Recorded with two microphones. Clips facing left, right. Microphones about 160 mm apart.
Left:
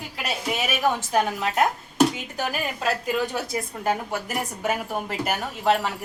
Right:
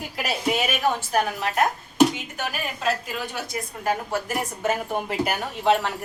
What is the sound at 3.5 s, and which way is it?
A woman's voice, 20° left (ahead or behind).